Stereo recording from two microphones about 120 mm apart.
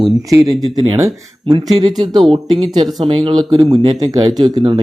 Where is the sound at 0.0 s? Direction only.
30° right (ahead or behind).